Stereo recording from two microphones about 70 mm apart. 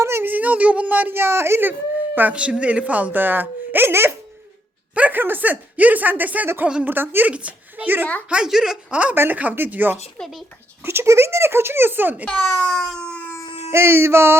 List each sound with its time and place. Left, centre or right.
0.0 s a sound: right
0.3 s speech: right
2.1 s a woman's voice: centre; by 4.1 s right
4.9 s a woman's voice: centre
7.3 s a woman's voice: centre
8.4 s speech: centre
8.9 s a woman's voice: centre
10.2 s speech: centre
10.8 s speech: right
12.2 s speech: centre
13.7 s speech: right